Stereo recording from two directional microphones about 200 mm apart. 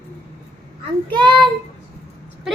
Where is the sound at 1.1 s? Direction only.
20° right (ahead or behind).